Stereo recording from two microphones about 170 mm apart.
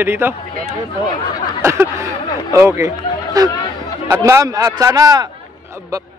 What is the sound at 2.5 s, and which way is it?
Speech, 20° right (ahead or behind).